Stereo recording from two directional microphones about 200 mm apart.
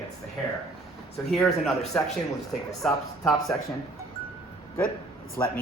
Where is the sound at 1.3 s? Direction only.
Centre (ahead or behind).